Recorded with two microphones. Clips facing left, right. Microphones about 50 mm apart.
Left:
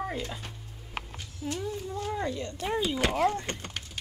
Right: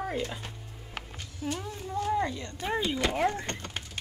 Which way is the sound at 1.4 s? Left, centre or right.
Right.